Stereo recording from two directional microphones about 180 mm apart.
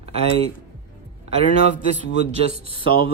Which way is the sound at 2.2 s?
35° right (ahead or behind).